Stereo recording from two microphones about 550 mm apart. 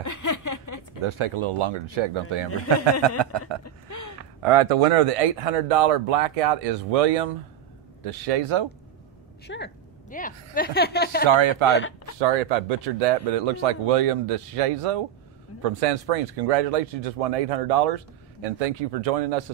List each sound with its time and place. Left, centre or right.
0.0 s a sound: left
1.0 s speech: right
3.6 s a sound: left
4.4 s speech: right
9.5 s a woman's voice: centre
11.2 s speech: right
11.7 s speech: left
12.8 s speech: right